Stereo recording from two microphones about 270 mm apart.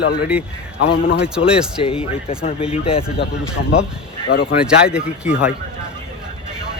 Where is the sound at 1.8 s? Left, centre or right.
Left.